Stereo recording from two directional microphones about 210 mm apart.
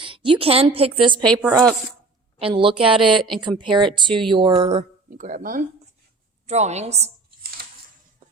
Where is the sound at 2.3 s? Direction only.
25° right (ahead or behind).